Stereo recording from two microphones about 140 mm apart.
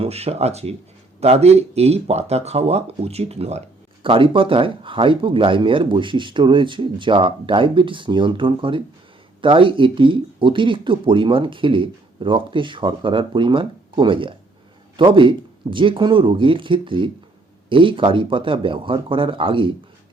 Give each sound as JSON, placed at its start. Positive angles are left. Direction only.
{"t": 0.0, "sound": "speech", "side_deg": -45}